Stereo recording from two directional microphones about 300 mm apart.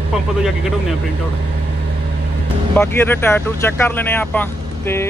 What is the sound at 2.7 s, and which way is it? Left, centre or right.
Speech, centre.